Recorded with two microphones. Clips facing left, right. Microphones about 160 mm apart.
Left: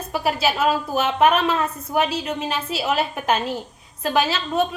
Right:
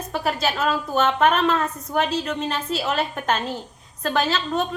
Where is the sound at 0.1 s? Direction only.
10° left (ahead or behind).